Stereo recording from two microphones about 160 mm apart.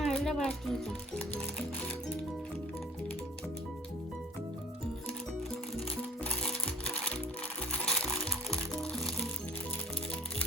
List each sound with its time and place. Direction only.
0.0 s music: centre (ahead or behind)
6.2 s music: 5° left (ahead or behind)